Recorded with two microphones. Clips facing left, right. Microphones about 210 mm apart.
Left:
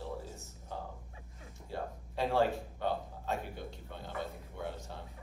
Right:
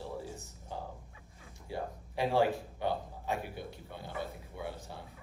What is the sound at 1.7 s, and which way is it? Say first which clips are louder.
A man's voice: right 1 dB; 10° right (ahead or behind).